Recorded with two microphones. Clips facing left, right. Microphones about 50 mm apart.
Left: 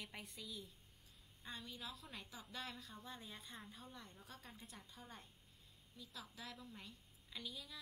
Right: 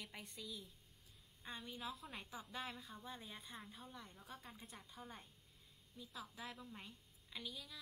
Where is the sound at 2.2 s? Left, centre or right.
Right.